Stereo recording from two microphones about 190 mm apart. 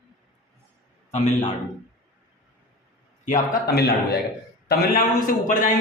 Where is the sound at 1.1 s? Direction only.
35° left (ahead or behind).